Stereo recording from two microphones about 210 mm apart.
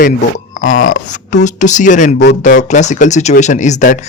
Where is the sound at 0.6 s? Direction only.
70° left (ahead or behind).